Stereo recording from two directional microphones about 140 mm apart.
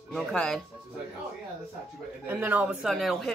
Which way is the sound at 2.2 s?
10° right (ahead or behind).